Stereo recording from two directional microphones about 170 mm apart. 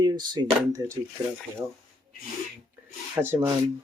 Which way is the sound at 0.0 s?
25° right (ahead or behind).